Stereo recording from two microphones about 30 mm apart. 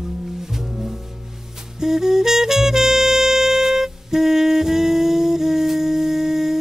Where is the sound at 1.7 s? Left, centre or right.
Centre.